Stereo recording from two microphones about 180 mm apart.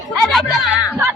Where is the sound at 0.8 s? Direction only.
10° right (ahead or behind).